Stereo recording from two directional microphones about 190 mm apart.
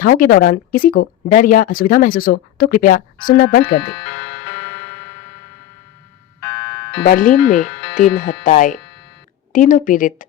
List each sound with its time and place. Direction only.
0.0 s speech: 45° left (ahead or behind)
4.0 s music: 75° left (ahead or behind)
6.4 s music: 75° left (ahead or behind)
7.0 s speech: 45° left (ahead or behind)